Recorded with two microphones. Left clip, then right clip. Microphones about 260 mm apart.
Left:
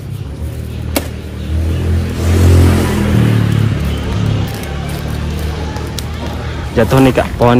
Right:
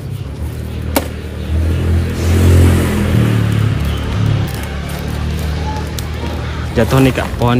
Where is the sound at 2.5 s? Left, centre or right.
Centre.